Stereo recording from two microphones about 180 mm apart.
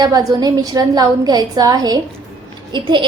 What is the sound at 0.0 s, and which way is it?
A woman's voice, 20° right (ahead or behind).